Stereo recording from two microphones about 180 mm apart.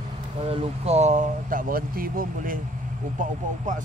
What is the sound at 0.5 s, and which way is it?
Speech, 35° right (ahead or behind).